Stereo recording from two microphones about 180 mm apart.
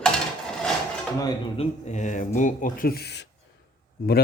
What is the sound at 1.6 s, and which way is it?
Speech, 40° left (ahead or behind).